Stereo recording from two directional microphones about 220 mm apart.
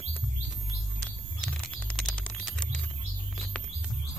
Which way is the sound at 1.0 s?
5° left (ahead or behind).